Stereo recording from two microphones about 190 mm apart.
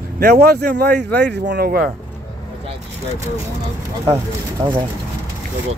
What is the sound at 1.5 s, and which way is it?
Speech, 50° right (ahead or behind).